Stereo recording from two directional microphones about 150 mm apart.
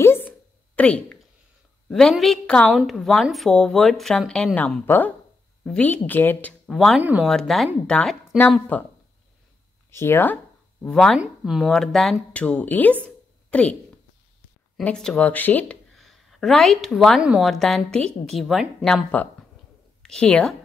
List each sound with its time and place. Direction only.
0.0 s a sound: 15° left (ahead or behind)
0.7 s a woman's voice: 10° left (ahead or behind)
6.7 s a woman's voice: centre (ahead or behind)
7.0 s speech: 10° right (ahead or behind)
7.2 s a woman's voice: centre (ahead or behind)
9.8 s a woman's voice: 15° left (ahead or behind)
13.0 s a sound: 10° left (ahead or behind)
14.8 s speech: 5° left (ahead or behind)
16.0 s a woman's voice: centre (ahead or behind)